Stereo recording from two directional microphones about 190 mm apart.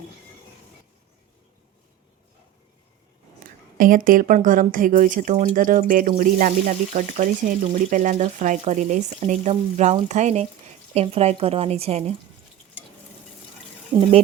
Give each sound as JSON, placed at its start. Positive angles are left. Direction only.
{"t": 3.8, "sound": "speech", "side_deg": -45}